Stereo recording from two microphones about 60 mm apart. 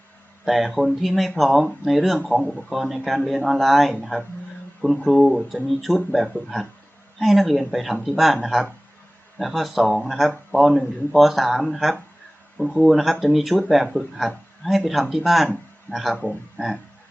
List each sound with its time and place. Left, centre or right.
0.4 s speech: centre
9.4 s speech: centre
16.1 s speech: left